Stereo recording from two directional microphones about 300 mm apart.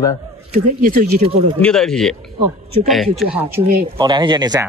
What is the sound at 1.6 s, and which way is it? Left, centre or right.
Speech, centre.